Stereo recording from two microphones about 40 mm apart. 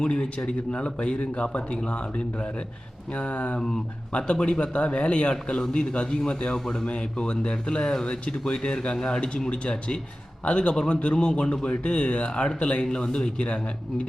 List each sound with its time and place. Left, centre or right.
0.0 s speech: left
6.8 s speech: left